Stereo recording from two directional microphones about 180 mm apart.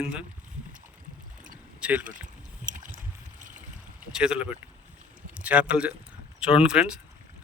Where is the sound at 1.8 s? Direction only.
10° right (ahead or behind).